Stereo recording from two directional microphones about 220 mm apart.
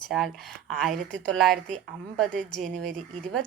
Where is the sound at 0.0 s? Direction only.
Centre (ahead or behind).